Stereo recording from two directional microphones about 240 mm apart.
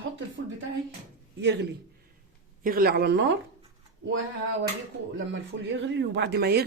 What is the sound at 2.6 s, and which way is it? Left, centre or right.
Speech, right.